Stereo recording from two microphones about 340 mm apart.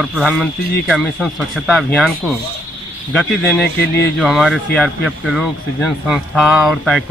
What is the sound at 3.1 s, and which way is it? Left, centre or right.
Speech, centre.